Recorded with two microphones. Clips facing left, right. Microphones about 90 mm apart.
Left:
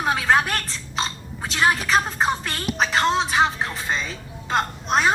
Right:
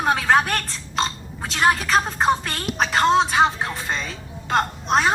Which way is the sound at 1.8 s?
Centre (ahead or behind).